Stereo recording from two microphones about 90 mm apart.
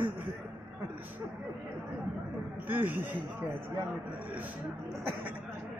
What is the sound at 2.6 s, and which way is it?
Speech, 20° right (ahead or behind).